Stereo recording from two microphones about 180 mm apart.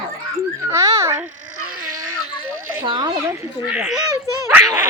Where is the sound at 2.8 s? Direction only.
25° right (ahead or behind).